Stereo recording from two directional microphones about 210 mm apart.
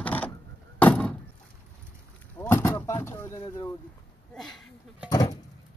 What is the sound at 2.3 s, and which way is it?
Vehicle, 10° left (ahead or behind).